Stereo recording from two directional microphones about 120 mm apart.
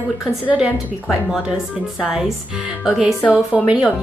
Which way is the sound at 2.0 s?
5° right (ahead or behind).